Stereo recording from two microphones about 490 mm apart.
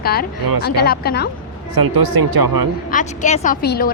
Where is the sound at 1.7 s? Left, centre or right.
Right.